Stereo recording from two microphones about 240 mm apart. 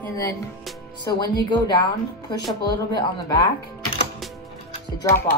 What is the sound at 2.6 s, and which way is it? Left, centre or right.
Speech, centre.